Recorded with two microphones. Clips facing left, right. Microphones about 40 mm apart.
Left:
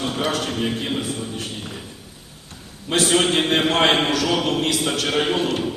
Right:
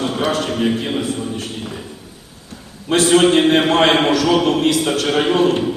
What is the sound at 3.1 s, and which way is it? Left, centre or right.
A man's voice, centre.